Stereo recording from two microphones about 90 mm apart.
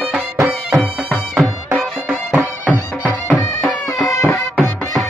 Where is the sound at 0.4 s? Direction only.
10° right (ahead or behind).